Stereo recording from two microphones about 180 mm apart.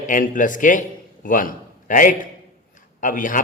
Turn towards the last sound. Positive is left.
turn(degrees=45)  # may be behind; listen again after turning